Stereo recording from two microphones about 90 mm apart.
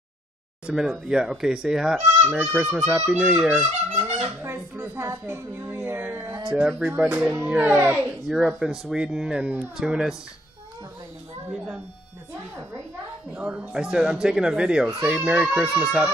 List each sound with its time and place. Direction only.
0.7 s speech: 5° right (ahead or behind)
4.0 s a child's voice: 25° right (ahead or behind)
8.3 s speech: 10° right (ahead or behind)
11.5 s speech: 10° right (ahead or behind)
13.3 s speech: 10° right (ahead or behind)